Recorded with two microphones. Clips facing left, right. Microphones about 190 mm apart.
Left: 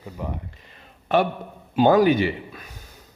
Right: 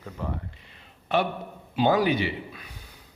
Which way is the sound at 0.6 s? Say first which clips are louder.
Left 3 dB; 45° left (ahead or behind).